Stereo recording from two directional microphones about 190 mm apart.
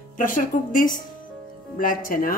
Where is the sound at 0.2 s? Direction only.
45° left (ahead or behind).